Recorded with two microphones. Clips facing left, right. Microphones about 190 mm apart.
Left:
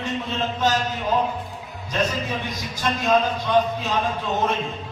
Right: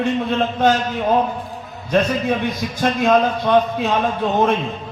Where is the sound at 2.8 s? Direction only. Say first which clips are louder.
Right 5 dB; 55° right (ahead or behind).